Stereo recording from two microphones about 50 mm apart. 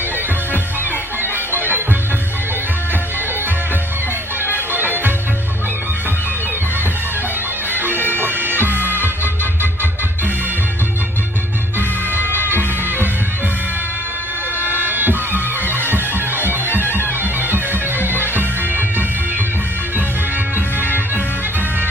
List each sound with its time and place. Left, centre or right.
4.7 s music: right
7.7 s bagpipes: right
7.9 s bagpipes: left
8.2 s music: right
14.6 s music: right
17.5 s bagpipes: right